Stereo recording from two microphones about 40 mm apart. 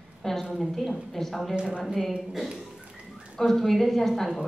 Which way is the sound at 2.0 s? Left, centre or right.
Centre.